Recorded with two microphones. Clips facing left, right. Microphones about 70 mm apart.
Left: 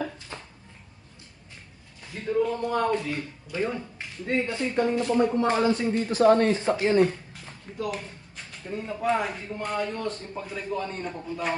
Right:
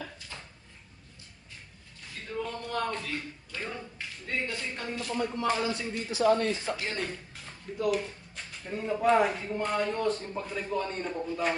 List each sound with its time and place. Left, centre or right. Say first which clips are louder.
2.1 s speech: left 10 dB; left
6.7 s speech: left 13 dB; left
7.9 s speech: right 4 dB; centre